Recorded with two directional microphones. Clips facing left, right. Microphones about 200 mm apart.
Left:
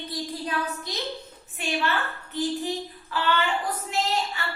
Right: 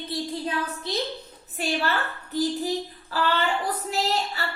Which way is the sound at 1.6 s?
35° right (ahead or behind).